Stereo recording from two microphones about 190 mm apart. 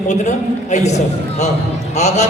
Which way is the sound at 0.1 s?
40° left (ahead or behind).